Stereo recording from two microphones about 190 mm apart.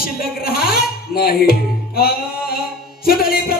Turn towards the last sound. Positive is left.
turn(degrees=50)  # may be behind; listen again after turning